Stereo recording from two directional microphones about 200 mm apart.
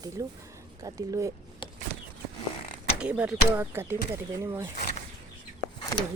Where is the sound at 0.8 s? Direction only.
15° right (ahead or behind).